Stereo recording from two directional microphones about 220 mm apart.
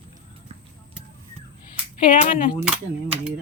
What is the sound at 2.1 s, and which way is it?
Speech, 35° left (ahead or behind).